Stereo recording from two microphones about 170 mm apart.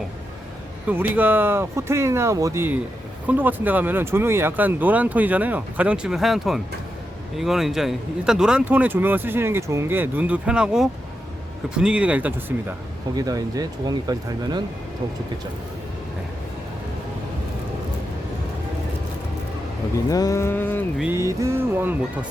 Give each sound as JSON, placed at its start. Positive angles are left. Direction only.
{"t": 0.9, "sound": "speech", "side_deg": -10}
{"t": 13.1, "sound": "speech", "side_deg": -20}
{"t": 20.1, "sound": "a sound", "side_deg": 20}
{"t": 21.0, "sound": "speech", "side_deg": -15}